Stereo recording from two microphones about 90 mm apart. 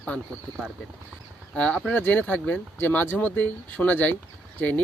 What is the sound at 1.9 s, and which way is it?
Speech, 20° left (ahead or behind).